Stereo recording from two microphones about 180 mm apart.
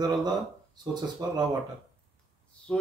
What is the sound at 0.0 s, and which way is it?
Speech, 20° right (ahead or behind).